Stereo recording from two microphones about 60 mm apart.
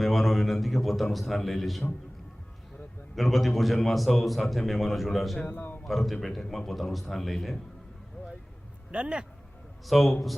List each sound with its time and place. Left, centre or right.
0.0 s a sound: centre
3.2 s a man's voice: centre
5.5 s a man's voice: left
5.8 s a man's voice: centre
8.9 s a man's voice: centre
9.8 s a man's voice: centre